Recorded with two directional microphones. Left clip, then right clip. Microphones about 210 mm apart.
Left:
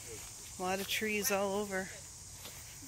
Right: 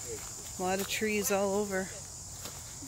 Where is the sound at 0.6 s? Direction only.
Centre (ahead or behind).